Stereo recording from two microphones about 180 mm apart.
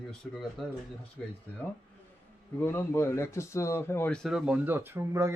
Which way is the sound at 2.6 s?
15° left (ahead or behind).